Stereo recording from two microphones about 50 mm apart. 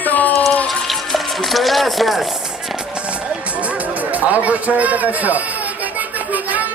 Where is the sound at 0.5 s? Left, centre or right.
Centre.